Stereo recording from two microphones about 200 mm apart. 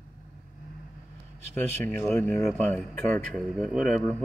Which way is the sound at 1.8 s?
10° left (ahead or behind).